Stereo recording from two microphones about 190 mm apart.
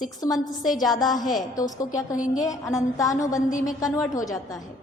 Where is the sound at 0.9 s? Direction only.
20° left (ahead or behind).